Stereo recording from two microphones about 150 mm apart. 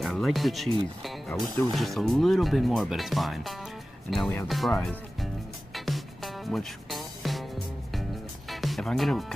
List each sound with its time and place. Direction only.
0.0 s speech: centre (ahead or behind)
5.9 s music: centre (ahead or behind)
8.5 s music: centre (ahead or behind)